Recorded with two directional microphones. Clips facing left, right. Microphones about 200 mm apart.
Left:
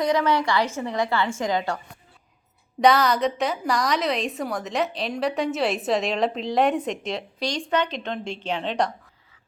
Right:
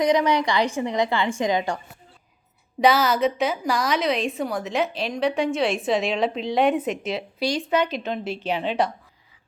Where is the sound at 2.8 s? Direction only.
5° right (ahead or behind).